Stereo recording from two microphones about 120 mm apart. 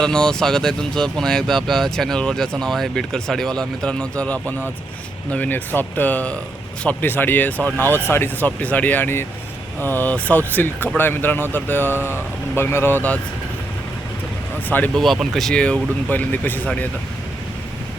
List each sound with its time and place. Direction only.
0.0 s speech: 5° left (ahead or behind)
14.9 s speech: centre (ahead or behind)